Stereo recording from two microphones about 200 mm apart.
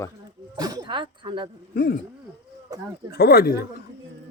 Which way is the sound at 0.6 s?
20° right (ahead or behind).